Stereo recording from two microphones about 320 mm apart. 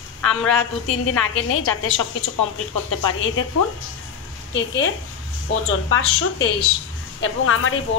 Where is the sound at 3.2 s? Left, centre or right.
Left.